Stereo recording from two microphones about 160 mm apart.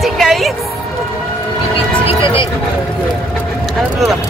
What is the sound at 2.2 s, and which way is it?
Speech, 30° left (ahead or behind).